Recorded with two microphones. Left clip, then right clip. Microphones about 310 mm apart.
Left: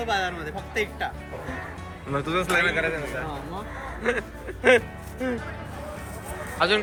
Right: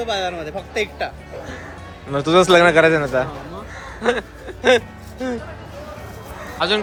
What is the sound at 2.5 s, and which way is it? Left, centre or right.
Speech, right.